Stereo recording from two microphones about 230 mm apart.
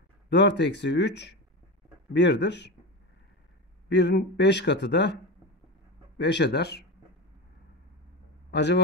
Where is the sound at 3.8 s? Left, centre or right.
Left.